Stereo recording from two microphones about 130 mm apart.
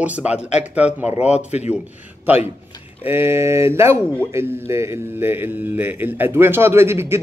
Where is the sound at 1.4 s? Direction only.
60° left (ahead or behind).